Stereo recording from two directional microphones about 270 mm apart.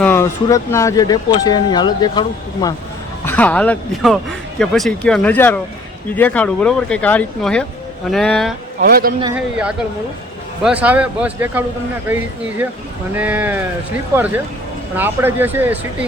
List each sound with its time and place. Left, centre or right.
0.0 s speech: centre
8.8 s speech: right
9.2 s speech: centre
14.9 s speech: centre